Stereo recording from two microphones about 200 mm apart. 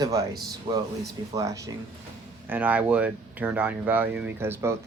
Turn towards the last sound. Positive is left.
turn(degrees=-10)  # may be behind; listen again after turning